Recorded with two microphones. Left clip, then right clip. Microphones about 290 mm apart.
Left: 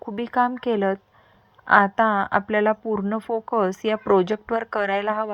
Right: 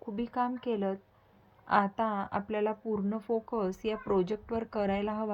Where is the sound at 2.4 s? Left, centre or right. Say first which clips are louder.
Left 11 dB; left.